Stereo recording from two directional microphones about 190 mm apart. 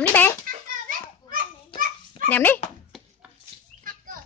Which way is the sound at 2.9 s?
Centre (ahead or behind).